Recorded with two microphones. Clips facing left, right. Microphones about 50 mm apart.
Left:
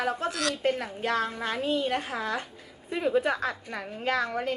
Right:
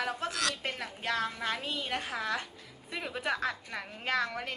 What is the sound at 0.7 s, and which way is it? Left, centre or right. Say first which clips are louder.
A woman's voice: left 7 dB; left.